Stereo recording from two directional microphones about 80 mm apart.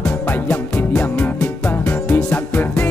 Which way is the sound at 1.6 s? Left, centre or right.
Left.